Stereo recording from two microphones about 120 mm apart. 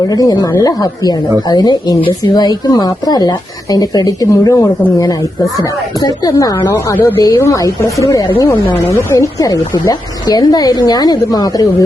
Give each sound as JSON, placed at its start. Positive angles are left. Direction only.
{"t": 0.1, "sound": "a woman's voice", "side_deg": 30}
{"t": 6.7, "sound": "a woman's voice", "side_deg": 20}